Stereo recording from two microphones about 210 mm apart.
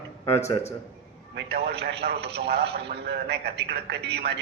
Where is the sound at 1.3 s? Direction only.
50° right (ahead or behind).